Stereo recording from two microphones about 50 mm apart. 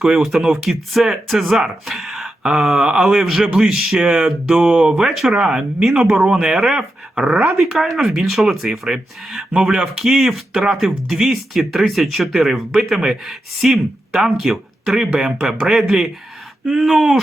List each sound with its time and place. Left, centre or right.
0.0 s speech: centre
4.0 s speech: centre
4.3 s speech: centre
7.5 s speech: centre
14.9 s speech: centre